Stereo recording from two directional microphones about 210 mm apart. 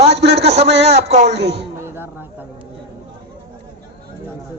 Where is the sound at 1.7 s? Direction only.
10° right (ahead or behind).